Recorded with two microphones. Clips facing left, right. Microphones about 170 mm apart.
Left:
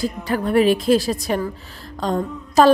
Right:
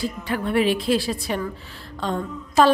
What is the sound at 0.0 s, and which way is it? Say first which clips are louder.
A woman's voice: left 4 dB; 40° left (ahead or behind).